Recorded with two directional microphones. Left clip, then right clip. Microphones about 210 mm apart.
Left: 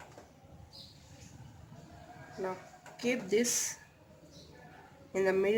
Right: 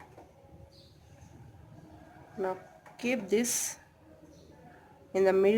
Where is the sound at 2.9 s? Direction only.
25° right (ahead or behind).